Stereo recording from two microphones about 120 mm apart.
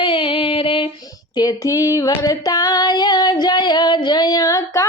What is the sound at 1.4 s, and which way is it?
Female singing, 30° left (ahead or behind).